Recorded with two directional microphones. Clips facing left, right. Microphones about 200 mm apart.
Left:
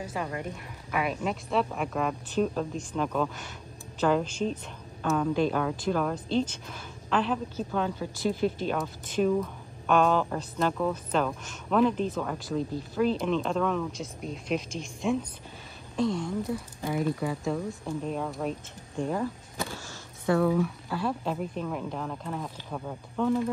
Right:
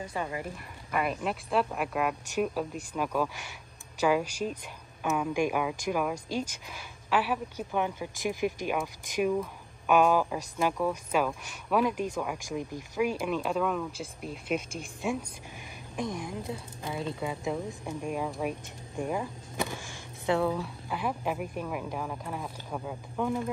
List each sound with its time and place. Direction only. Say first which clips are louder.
0.0 s speech: left 1 dB; centre (ahead or behind)
16.0 s speech: left 6 dB; 15° right (ahead or behind)